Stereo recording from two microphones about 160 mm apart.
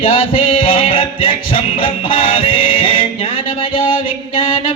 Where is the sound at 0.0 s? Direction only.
35° left (ahead or behind).